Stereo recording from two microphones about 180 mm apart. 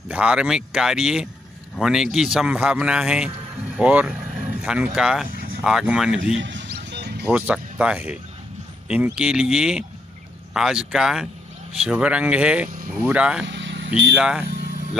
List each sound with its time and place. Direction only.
0.1 s a man's voice: 5° right (ahead or behind)
6.3 s music: 90° right; by 7.2 s 65° right (ahead or behind)
7.2 s a man's voice: 5° right (ahead or behind)
13.5 s vehicle: 90° right
14.1 s a man's voice: 5° right (ahead or behind)